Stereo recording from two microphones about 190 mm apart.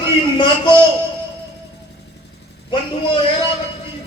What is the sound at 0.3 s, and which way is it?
Speech, 25° left (ahead or behind).